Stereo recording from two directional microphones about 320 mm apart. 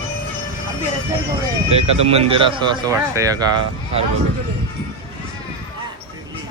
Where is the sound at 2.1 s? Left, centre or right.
Centre.